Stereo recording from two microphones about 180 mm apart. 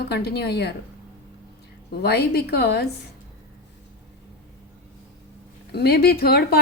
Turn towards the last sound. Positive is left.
turn(degrees=60)  # may be behind; listen again after turning